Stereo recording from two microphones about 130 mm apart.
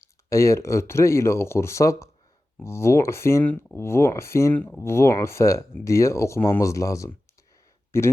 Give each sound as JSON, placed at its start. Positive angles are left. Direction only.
{"t": 0.0, "sound": "speech", "side_deg": 25}